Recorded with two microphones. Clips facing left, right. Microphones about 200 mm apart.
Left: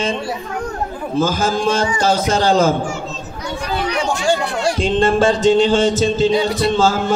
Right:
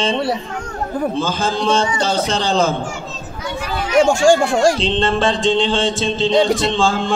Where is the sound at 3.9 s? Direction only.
45° right (ahead or behind).